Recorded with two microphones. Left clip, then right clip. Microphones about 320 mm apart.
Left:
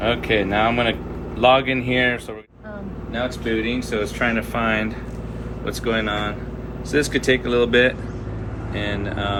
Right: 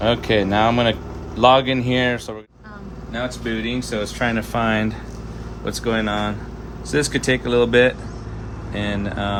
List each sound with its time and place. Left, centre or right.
0.0 s speech: right